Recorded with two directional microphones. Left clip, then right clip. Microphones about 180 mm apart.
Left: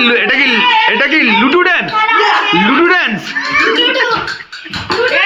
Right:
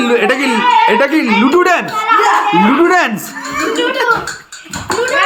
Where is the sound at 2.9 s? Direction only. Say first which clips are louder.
Even; 15° right (ahead or behind).